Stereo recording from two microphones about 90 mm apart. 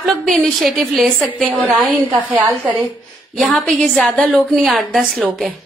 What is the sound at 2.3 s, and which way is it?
Speech, 15° right (ahead or behind).